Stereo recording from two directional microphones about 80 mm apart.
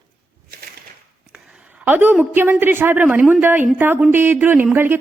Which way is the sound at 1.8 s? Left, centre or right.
Right.